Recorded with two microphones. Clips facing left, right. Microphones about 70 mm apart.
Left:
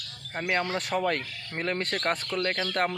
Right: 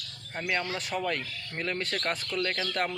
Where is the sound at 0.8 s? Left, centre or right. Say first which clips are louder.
Left 4 dB; left.